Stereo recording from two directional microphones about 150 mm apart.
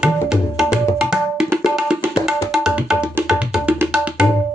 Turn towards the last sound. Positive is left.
turn(degrees=-5)  # may be behind; listen again after turning